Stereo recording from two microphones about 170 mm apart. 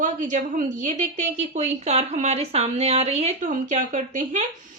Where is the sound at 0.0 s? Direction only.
50° right (ahead or behind).